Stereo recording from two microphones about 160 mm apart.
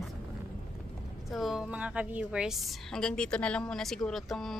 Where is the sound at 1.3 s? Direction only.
Centre (ahead or behind).